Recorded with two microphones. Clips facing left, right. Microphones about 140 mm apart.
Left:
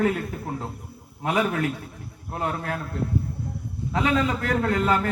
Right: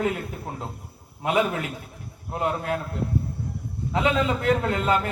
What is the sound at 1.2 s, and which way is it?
A man's voice, 20° right (ahead or behind).